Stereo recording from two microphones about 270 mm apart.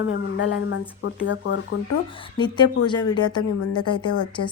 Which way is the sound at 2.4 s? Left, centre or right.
Centre.